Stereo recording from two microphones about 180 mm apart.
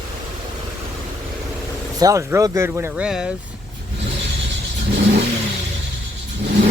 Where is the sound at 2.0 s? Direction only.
20° right (ahead or behind).